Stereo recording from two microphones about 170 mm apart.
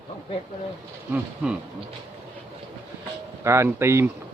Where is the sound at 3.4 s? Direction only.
15° right (ahead or behind).